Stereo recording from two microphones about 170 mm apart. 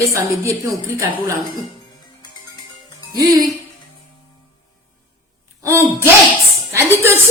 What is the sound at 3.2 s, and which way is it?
Speech, 25° right (ahead or behind).